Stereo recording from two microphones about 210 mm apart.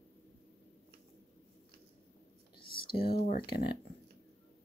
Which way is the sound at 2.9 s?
25° left (ahead or behind).